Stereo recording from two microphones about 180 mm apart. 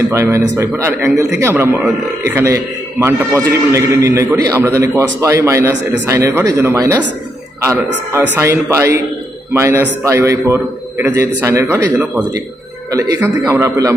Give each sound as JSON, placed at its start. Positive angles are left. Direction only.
{"t": 0.1, "sound": "a man's voice", "side_deg": -15}
{"t": 8.4, "sound": "a man's voice", "side_deg": -15}